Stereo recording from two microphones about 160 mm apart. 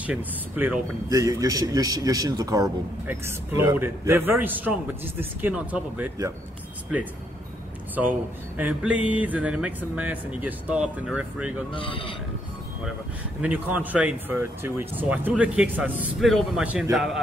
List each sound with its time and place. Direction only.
0.0 s a man's voice: 10° right (ahead or behind)
1.1 s a man's voice: 20° right (ahead or behind)
8.5 s a man's voice: 10° right (ahead or behind)
11.7 s speech: 30° left (ahead or behind)
13.4 s a man's voice: 10° right (ahead or behind)